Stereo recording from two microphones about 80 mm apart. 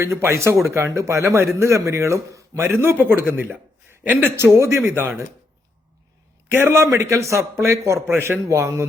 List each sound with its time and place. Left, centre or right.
0.0 s a man's voice: right
4.4 s a man's voice: right
6.5 s a man's voice: right